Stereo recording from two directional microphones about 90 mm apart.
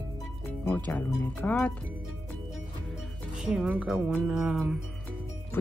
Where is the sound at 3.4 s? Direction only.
10° right (ahead or behind).